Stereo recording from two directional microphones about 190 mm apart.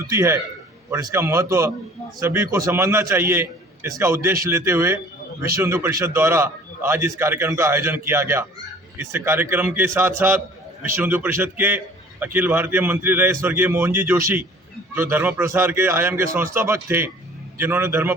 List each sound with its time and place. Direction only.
0.1 s a man's voice: 15° right (ahead or behind)